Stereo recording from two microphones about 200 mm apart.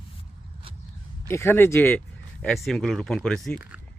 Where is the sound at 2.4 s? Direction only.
Centre (ahead or behind).